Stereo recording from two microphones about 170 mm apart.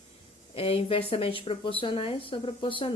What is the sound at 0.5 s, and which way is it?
Speech, 35° left (ahead or behind).